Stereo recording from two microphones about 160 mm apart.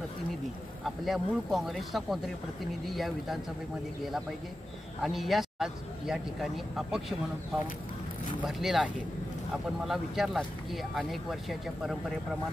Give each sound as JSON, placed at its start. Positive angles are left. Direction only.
{"t": 0.8, "sound": "speech", "side_deg": 0}
{"t": 5.0, "sound": "speech", "side_deg": 0}
{"t": 8.4, "sound": "speech", "side_deg": 0}